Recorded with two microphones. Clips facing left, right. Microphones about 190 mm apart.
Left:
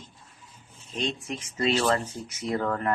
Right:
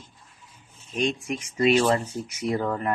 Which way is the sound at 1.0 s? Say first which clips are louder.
Right 5 dB; 10° right (ahead or behind).